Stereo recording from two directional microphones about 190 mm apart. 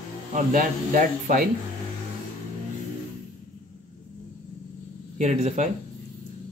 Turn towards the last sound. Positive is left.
turn(degrees=-35)  # may be behind; listen again after turning